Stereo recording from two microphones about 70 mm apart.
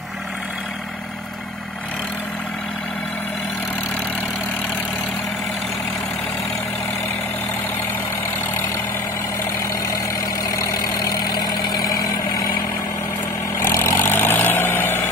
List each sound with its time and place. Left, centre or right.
10.5 s vehicle: left
13.6 s vehicle: left